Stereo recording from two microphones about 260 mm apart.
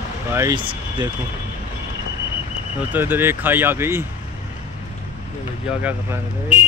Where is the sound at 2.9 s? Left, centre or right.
Centre.